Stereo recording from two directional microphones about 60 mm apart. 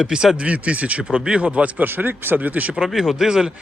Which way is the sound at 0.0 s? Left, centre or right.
Centre.